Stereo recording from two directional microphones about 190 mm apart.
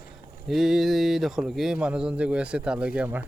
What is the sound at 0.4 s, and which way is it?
Speech, centre (ahead or behind).